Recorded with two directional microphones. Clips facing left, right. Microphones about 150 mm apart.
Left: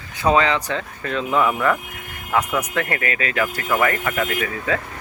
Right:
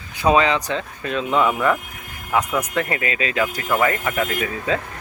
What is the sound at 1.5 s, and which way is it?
Speech, 10° right (ahead or behind).